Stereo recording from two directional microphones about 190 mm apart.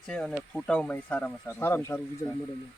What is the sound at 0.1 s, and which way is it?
Speech, 5° left (ahead or behind).